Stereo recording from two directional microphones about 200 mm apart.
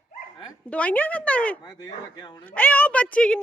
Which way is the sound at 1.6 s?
20° left (ahead or behind).